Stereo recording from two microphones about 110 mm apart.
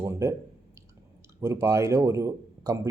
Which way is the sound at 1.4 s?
25° right (ahead or behind).